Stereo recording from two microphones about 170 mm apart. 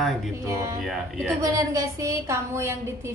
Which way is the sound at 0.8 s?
Centre (ahead or behind).